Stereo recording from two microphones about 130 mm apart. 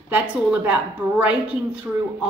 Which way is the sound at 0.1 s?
10° right (ahead or behind).